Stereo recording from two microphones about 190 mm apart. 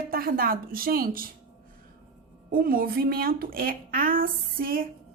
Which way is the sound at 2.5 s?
50° right (ahead or behind).